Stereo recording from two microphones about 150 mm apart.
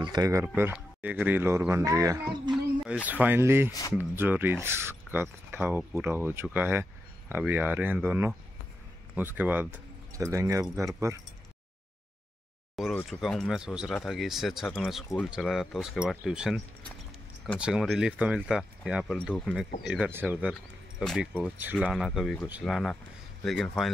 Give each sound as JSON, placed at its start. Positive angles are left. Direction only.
{"t": 0.0, "sound": "speech", "side_deg": -25}
{"t": 0.7, "sound": "speech", "side_deg": -10}
{"t": 2.9, "sound": "speech", "side_deg": -10}
{"t": 12.9, "sound": "speech", "side_deg": 5}
{"t": 21.0, "sound": "speech", "side_deg": 5}
{"t": 21.3, "sound": "speech", "side_deg": -10}